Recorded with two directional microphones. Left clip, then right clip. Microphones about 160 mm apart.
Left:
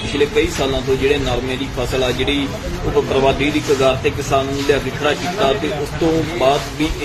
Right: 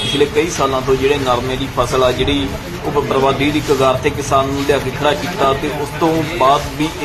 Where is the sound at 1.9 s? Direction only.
Centre (ahead or behind).